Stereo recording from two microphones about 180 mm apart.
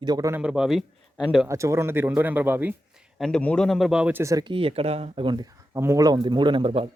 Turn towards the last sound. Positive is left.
turn(degrees=-30)  # may be behind; listen again after turning